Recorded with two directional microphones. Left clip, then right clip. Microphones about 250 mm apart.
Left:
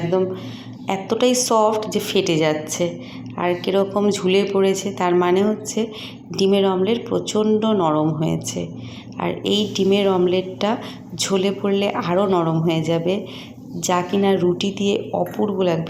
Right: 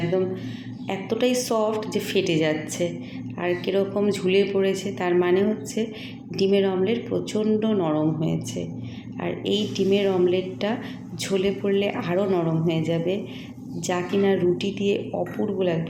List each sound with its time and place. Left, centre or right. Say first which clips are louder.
0.9 s speech: left 5 dB; centre